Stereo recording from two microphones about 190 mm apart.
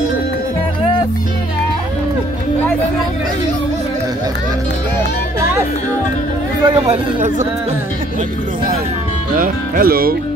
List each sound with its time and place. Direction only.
6.6 s speech: 25° right (ahead or behind)
7.2 s speech: 40° right (ahead or behind)
9.3 s speech: 50° right (ahead or behind)